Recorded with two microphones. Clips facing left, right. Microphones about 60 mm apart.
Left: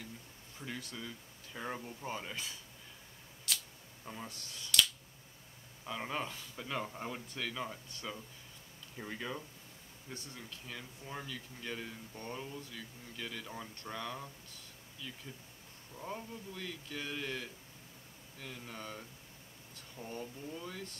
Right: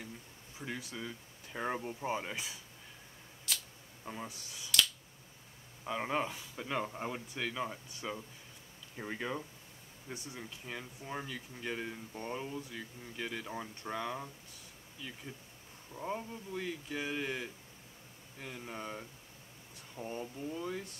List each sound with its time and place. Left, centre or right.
0.6 s speech: centre
3.5 s a sound: centre
4.0 s speech: centre
5.9 s speech: centre
15.9 s speech: centre